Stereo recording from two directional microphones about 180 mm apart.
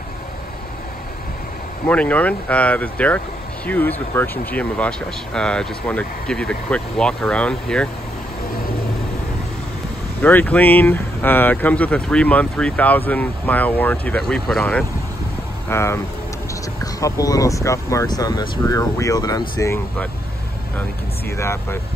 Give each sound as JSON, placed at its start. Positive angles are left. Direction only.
{"t": 1.9, "sound": "speech", "side_deg": 10}
{"t": 10.2, "sound": "speech", "side_deg": 10}
{"t": 15.7, "sound": "speech", "side_deg": 15}
{"t": 21.4, "sound": "speech", "side_deg": 15}